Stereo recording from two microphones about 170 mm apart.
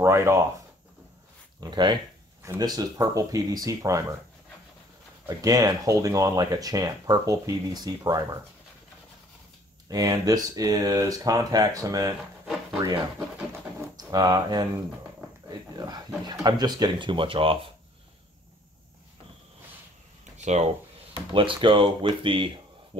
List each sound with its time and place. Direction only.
0.0 s speech: 15° right (ahead or behind)
1.6 s speech: 25° right (ahead or behind)
5.4 s speech: 20° right (ahead or behind)
9.8 s speech: 20° right (ahead or behind)
15.7 s speech: 25° right (ahead or behind)
20.4 s speech: 40° right (ahead or behind)
21.3 s speech: 30° right (ahead or behind)